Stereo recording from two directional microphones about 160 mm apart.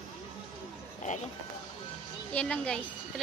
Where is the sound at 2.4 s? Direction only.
5° left (ahead or behind).